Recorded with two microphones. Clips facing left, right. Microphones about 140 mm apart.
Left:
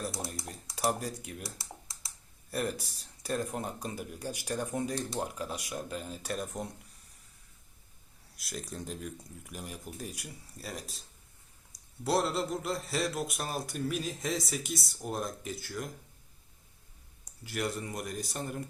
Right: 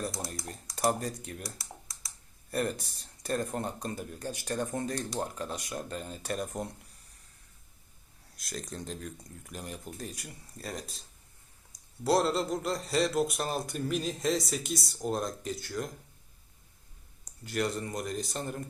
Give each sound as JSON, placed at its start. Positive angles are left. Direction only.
{"t": 0.8, "sound": "speech", "side_deg": 5}
{"t": 1.5, "sound": "typing", "side_deg": 25}
{"t": 2.5, "sound": "speech", "side_deg": 5}
{"t": 8.4, "sound": "speech", "side_deg": 5}
{"t": 12.0, "sound": "speech", "side_deg": 0}
{"t": 17.4, "sound": "speech", "side_deg": 5}